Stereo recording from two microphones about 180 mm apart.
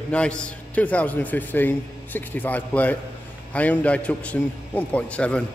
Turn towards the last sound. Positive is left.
turn(degrees=5)  # may be behind; listen again after turning